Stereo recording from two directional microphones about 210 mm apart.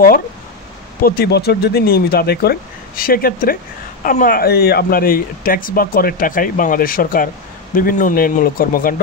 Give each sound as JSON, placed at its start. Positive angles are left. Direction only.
{"t": 1.0, "sound": "speech", "side_deg": 45}